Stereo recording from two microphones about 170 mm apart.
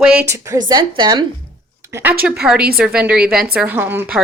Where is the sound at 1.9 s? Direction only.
10° right (ahead or behind).